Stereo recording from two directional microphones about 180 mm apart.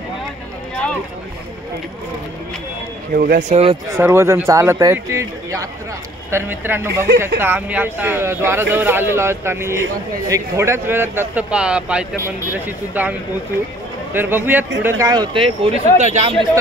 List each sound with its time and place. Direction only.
3.1 s speech: 50° right (ahead or behind)
3.9 s a man's voice: 15° right (ahead or behind)
14.1 s a man's voice: 10° right (ahead or behind); by 16.3 s 40° right (ahead or behind)